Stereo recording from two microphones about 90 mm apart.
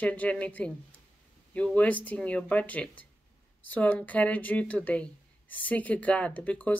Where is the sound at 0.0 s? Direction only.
15° left (ahead or behind).